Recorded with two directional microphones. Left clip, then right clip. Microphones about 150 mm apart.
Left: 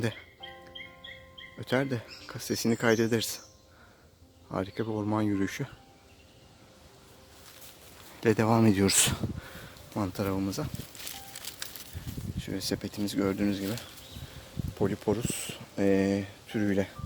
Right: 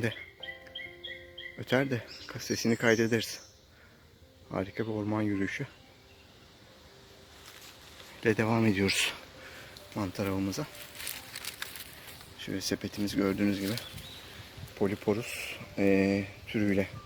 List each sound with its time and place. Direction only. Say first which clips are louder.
1.5 s speech: even; centre (ahead or behind)
4.4 s speech: left 1 dB; 10° left (ahead or behind)
8.2 s speech: left 3 dB; 20° left (ahead or behind)
9.9 s speech: left 2 dB; 15° left (ahead or behind)
11.3 s a sound: right 4 dB; 15° left (ahead or behind)
12.4 s speech: even; 5° left (ahead or behind)
14.8 s speech: left 1 dB; 5° left (ahead or behind)